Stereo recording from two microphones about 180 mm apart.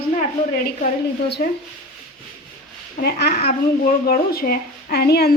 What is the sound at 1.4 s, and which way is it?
Speech, 55° left (ahead or behind).